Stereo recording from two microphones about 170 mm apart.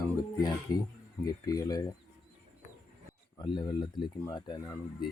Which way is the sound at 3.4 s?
25° left (ahead or behind).